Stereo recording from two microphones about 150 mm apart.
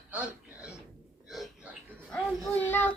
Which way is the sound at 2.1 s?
10° left (ahead or behind).